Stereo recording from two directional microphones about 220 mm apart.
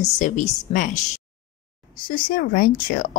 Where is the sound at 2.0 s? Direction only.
40° left (ahead or behind).